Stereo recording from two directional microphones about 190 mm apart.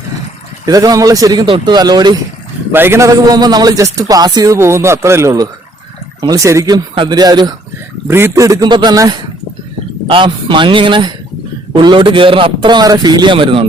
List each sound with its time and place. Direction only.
0.6 s a man's voice: 20° right (ahead or behind)